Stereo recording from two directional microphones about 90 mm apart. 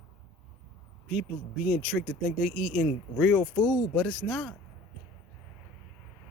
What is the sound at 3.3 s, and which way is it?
Speech, 15° left (ahead or behind).